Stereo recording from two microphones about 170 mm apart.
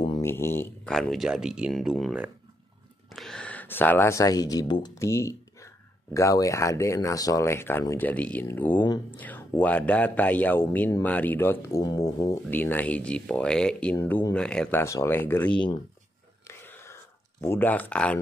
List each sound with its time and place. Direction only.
0.2 s mantra: 15° left (ahead or behind)
0.9 s speech: centre (ahead or behind)
8.8 s speech: 25° left (ahead or behind)
9.2 s speech: 10° left (ahead or behind)
16.4 s whispering: 15° left (ahead or behind)